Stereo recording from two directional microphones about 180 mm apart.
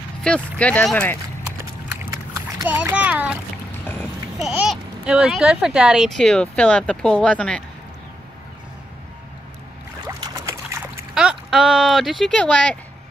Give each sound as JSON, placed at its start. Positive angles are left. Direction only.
{"t": 0.2, "sound": "speech", "side_deg": 5}
{"t": 2.6, "sound": "a child's voice", "side_deg": -10}
{"t": 4.4, "sound": "a child's voice", "side_deg": -5}
{"t": 10.0, "sound": "boat", "side_deg": -15}
{"t": 11.1, "sound": "speech", "side_deg": -5}